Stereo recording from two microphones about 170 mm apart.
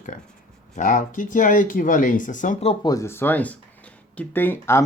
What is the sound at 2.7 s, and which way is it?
Speech, 25° left (ahead or behind).